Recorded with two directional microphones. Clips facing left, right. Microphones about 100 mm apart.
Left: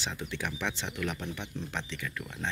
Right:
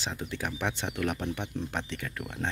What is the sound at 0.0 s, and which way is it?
Speech, 40° right (ahead or behind).